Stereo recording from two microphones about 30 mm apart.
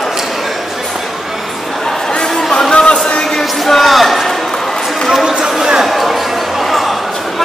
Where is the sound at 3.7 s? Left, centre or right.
Centre.